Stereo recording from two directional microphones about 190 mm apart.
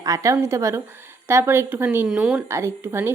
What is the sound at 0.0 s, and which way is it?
Speech, 15° right (ahead or behind).